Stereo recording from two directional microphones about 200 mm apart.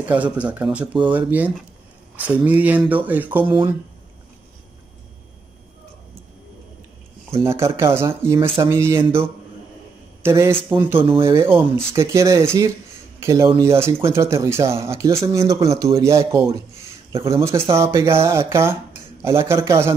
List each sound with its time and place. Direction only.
0.1 s speech: 5° right (ahead or behind)
3.4 s speech: 25° right (ahead or behind)
7.4 s speech: 15° right (ahead or behind)